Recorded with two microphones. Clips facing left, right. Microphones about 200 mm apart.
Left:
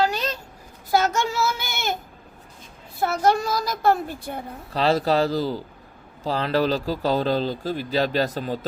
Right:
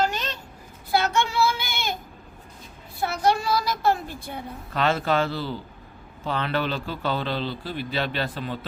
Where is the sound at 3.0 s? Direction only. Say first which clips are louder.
Left 3 dB; 45° left (ahead or behind).